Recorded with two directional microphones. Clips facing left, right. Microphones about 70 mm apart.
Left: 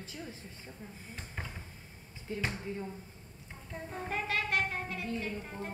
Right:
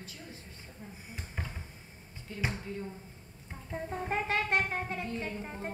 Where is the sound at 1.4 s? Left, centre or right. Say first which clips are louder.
Right 1 dB; centre.